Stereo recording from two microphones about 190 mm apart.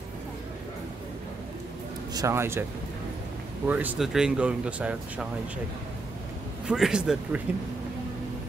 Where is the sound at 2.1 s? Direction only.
15° right (ahead or behind).